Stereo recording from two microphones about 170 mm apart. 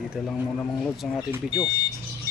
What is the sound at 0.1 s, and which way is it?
Speech, centre (ahead or behind).